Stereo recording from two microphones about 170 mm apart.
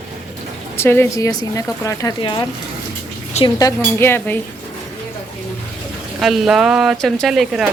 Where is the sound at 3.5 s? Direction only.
15° left (ahead or behind).